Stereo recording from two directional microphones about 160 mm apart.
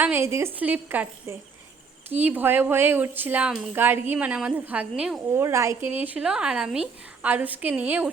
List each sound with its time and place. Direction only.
0.0 s speech: 15° right (ahead or behind)
5.3 s speech: 15° right (ahead or behind)